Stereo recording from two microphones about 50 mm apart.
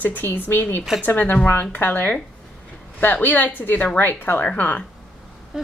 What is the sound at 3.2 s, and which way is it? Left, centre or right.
A woman's voice, left.